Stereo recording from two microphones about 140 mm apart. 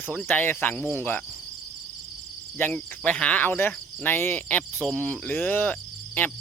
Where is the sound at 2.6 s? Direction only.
10° left (ahead or behind).